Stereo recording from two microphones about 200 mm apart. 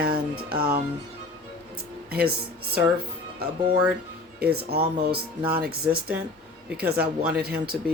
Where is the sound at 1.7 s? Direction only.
50° right (ahead or behind).